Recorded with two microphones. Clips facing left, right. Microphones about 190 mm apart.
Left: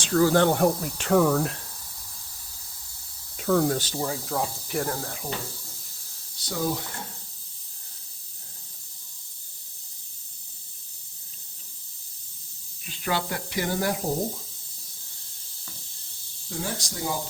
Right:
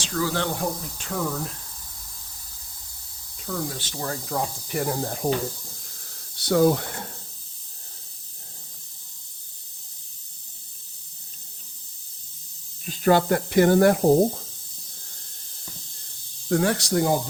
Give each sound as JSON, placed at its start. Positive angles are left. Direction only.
{"t": 0.0, "sound": "speech", "side_deg": 45}
{"t": 3.3, "sound": "speech", "side_deg": 70}
{"t": 4.0, "sound": "speech", "side_deg": 0}
{"t": 5.2, "sound": "speech", "side_deg": -50}
{"t": 6.3, "sound": "speech", "side_deg": -65}
{"t": 12.8, "sound": "speech", "side_deg": -45}
{"t": 16.5, "sound": "speech", "side_deg": -70}